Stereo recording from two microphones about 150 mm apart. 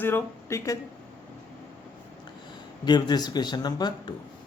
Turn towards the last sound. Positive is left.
turn(degrees=30)  # may be behind; listen again after turning